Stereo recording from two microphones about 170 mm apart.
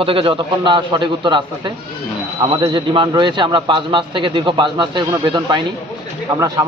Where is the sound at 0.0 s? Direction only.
30° right (ahead or behind).